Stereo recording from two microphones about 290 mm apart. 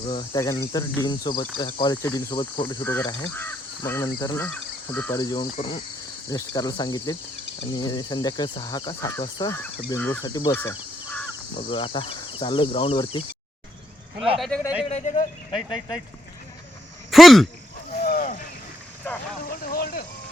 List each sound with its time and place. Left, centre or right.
0.1 s speech: centre
11.5 s speech: centre
14.3 s a man's voice: centre
14.8 s speech: left
17.1 s speech: centre
17.9 s vehicle: left
19.0 s a man's voice: centre
19.5 s speech: left